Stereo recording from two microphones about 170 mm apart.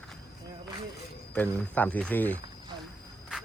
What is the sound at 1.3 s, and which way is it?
Speech, 10° left (ahead or behind).